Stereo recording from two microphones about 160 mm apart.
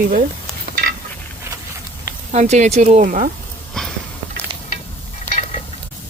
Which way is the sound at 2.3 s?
45° right (ahead or behind).